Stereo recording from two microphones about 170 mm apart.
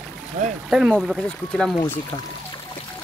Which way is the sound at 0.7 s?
Centre (ahead or behind).